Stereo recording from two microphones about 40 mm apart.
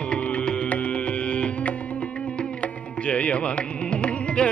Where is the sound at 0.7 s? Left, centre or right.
Left.